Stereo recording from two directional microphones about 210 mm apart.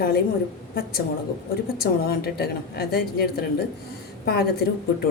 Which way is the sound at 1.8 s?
50° left (ahead or behind).